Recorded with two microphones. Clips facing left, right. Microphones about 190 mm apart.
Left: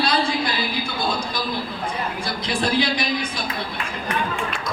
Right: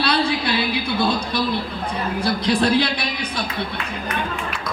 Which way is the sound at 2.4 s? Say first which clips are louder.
Right 3 dB; 65° right (ahead or behind).